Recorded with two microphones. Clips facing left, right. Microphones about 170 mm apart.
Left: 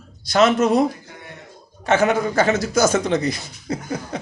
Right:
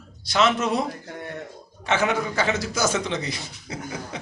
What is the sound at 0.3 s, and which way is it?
A man's voice, 45° left (ahead or behind).